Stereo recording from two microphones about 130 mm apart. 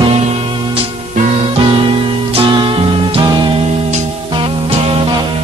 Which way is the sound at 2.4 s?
40° right (ahead or behind).